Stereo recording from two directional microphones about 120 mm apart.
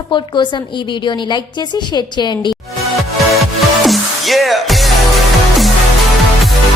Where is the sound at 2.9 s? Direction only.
Centre (ahead or behind).